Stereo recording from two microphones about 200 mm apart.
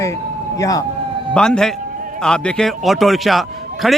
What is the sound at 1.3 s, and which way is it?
A man's voice, 5° left (ahead or behind).